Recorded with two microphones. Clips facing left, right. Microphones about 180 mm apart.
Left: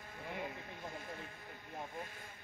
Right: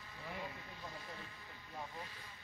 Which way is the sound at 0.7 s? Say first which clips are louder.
Left 3 dB; 50° left (ahead or behind).